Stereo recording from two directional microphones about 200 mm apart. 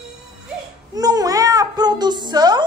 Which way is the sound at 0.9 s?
20° right (ahead or behind).